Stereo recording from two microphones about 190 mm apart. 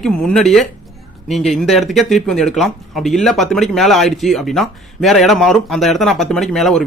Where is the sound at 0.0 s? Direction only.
5° left (ahead or behind).